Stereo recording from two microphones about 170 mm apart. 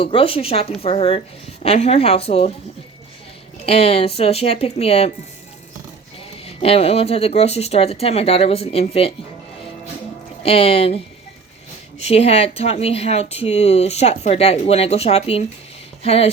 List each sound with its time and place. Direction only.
0.0 s speech: 30° left (ahead or behind)
3.7 s speech: 35° left (ahead or behind)
6.4 s speech: 35° left (ahead or behind)
10.4 s speech: 35° left (ahead or behind)